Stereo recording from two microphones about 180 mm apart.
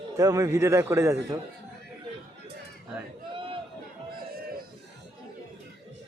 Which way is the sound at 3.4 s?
30° right (ahead or behind).